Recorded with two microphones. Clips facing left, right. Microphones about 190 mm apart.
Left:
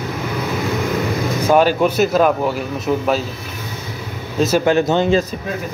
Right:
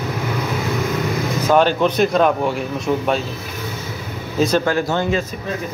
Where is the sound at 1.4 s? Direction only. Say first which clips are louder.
Left 1 dB; 10° left (ahead or behind).